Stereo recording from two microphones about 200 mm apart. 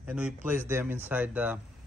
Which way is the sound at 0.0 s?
5° right (ahead or behind).